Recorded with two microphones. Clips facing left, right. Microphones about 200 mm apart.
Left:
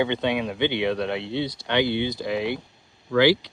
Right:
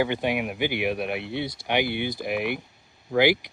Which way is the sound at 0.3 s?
20° right (ahead or behind).